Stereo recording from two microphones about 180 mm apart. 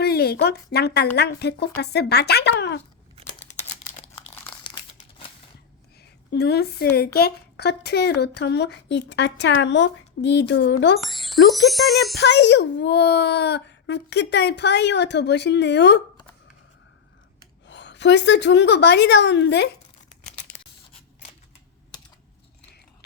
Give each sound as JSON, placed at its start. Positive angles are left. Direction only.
{"t": 0.0, "sound": "a woman's voice", "side_deg": 60}
{"t": 6.3, "sound": "a woman's voice", "side_deg": 65}
{"t": 11.0, "sound": "speech", "side_deg": 0}
{"t": 12.1, "sound": "a woman's voice", "side_deg": 70}
{"t": 17.7, "sound": "a woman's voice", "side_deg": 80}